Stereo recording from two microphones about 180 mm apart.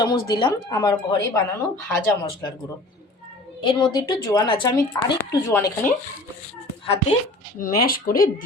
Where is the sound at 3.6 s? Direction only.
25° left (ahead or behind).